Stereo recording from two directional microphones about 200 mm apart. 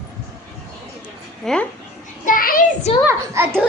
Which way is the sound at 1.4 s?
Centre (ahead or behind).